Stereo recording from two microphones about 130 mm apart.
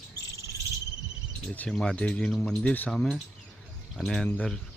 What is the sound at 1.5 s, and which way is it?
Speech, 10° left (ahead or behind).